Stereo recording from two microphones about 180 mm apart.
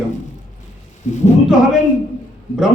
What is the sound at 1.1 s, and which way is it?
Speech, 40° left (ahead or behind).